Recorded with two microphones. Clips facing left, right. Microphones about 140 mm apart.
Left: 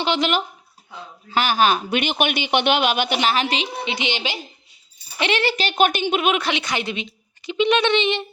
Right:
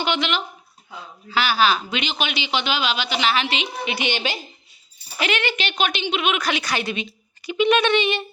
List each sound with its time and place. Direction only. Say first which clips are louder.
0.0 s speech: left 3 dB; 35° left (ahead or behind)
3.8 s a woman's voice: right 1 dB; 20° left (ahead or behind)
5.2 s speech: left 3 dB; 35° left (ahead or behind)
5.7 s speech: left 6 dB; 50° left (ahead or behind)
6.4 s a woman's voice: even; 20° left (ahead or behind)